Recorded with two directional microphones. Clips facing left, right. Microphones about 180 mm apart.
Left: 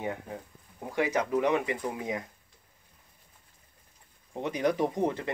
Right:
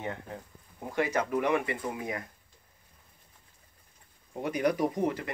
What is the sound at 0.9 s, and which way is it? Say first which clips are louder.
Speech: left 1 dB; 15° left (ahead or behind).